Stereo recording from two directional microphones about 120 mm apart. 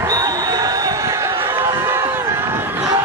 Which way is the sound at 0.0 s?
30° right (ahead or behind).